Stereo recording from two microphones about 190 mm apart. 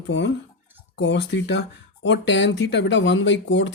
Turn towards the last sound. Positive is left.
turn(degrees=75)  # may be behind; listen again after turning